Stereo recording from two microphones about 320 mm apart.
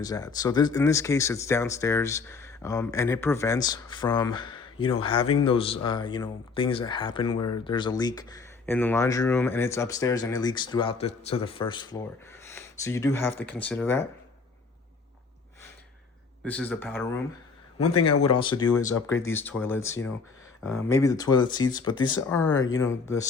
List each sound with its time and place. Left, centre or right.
0.0 s speech: centre
16.4 s speech: centre
18.9 s speech: left
19.2 s speech: centre